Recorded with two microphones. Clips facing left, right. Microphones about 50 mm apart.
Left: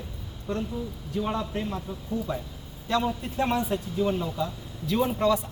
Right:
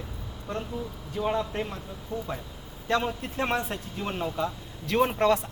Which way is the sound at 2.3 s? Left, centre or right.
Right.